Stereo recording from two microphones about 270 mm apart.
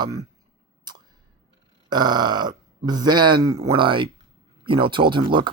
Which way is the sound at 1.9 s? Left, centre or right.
Centre.